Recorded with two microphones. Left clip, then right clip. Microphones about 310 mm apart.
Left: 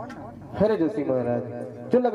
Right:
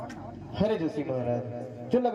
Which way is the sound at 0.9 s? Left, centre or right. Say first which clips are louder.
Left 6 dB; left.